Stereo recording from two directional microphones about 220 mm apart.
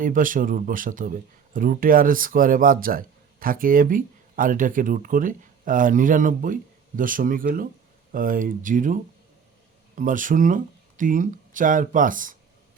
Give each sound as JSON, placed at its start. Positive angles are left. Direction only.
{"t": 0.0, "sound": "speech", "side_deg": -40}